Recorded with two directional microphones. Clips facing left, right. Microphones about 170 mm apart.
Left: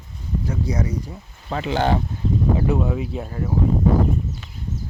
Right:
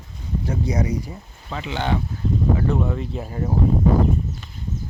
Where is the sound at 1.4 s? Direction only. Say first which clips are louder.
Left 4 dB; 45° left (ahead or behind).